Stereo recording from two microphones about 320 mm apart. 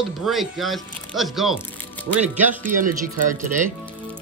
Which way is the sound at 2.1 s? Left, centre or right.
Right.